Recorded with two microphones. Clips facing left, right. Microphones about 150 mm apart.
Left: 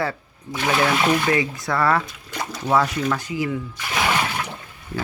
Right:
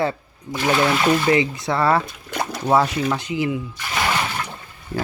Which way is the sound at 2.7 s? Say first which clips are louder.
Right 2 dB; 25° right (ahead or behind).